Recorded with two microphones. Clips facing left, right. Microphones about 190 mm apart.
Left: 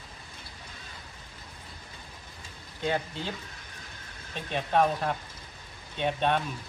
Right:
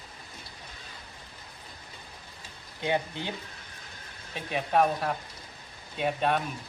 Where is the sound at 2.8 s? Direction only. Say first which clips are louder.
Right 1 dB; 20° right (ahead or behind).